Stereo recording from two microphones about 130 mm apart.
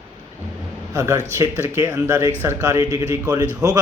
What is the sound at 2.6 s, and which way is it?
Speech, 25° right (ahead or behind).